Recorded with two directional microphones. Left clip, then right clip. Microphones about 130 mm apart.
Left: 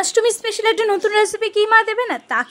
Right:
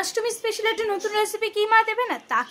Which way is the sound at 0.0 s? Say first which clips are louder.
Left 8 dB; 65° left (ahead or behind).